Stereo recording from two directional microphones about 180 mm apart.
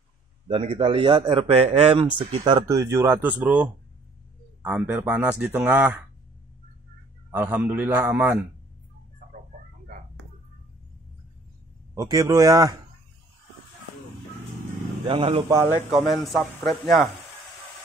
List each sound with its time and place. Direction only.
0.5 s a man's voice: 30° right (ahead or behind); by 6.0 s 5° right (ahead or behind)
7.2 s speech: 10° right (ahead or behind)
11.9 s a man's voice: 20° right (ahead or behind)
15.0 s a man's voice: 30° right (ahead or behind)
15.9 s speech: centre (ahead or behind)